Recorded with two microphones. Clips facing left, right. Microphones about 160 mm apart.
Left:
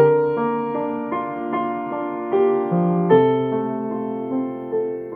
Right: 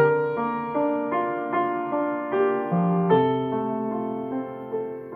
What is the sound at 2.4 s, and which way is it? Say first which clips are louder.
Music: left 5 dB; 25° left (ahead or behind).